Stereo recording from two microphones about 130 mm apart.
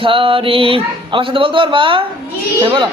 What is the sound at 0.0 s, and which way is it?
A man's voice, 40° right (ahead or behind).